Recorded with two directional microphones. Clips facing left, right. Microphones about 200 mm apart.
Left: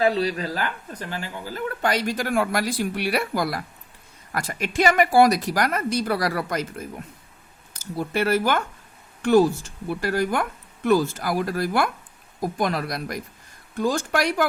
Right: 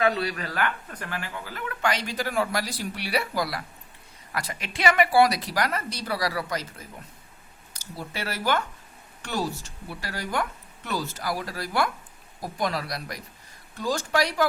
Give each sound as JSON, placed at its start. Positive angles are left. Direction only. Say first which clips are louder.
{"t": 0.0, "sound": "speech", "louder": "left 4 dB", "side_deg": 35}
{"t": 2.1, "sound": "a woman's voice", "louder": "left 4 dB", "side_deg": 55}